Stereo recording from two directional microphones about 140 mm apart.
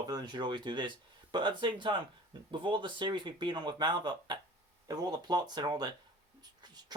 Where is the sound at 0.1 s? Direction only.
30° right (ahead or behind).